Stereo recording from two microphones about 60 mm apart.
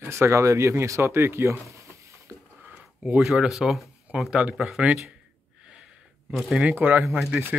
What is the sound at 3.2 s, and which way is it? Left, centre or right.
Speech, centre.